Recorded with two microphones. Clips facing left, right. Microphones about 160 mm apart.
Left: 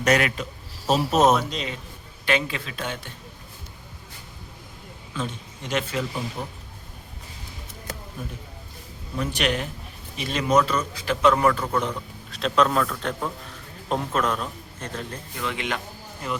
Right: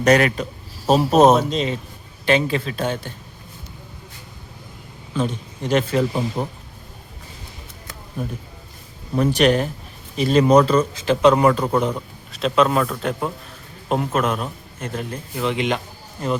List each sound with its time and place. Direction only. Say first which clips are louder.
0.0 s speech: right 6 dB; 35° right (ahead or behind)
5.1 s a man's voice: right 8 dB; 35° right (ahead or behind)
5.9 s speech: right 8 dB; 50° right (ahead or behind)
9.1 s a man's voice: right 9 dB; 40° right (ahead or behind); by 11.9 s 20° right (ahead or behind)
12.3 s a man's voice: right 4 dB; 5° right (ahead or behind)
15.4 s a man's voice: right 8 dB; 20° right (ahead or behind)